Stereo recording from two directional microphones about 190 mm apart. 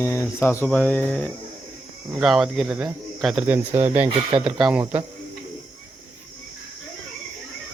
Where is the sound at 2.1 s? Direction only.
5° right (ahead or behind).